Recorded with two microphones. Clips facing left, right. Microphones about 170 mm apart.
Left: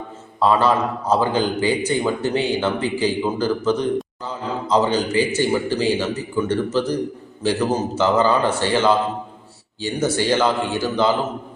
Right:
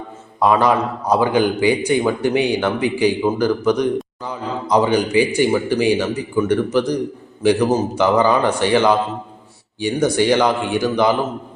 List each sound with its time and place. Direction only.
0.3 s a man's voice: 15° right (ahead or behind)